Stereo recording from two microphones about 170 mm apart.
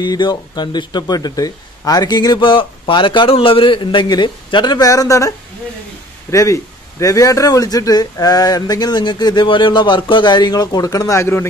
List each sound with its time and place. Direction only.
0.0 s speech: 25° left (ahead or behind)
6.3 s speech: 20° left (ahead or behind)